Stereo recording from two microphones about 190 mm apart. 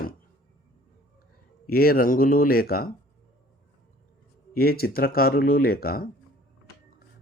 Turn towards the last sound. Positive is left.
turn(degrees=50)  # may be behind; listen again after turning